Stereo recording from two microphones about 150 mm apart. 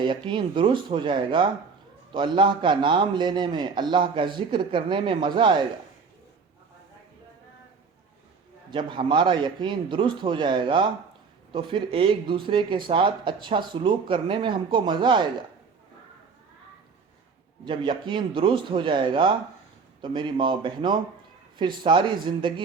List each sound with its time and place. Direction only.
0.0 s speech: 30° right (ahead or behind)
8.7 s speech: 35° right (ahead or behind)
17.7 s speech: 35° right (ahead or behind)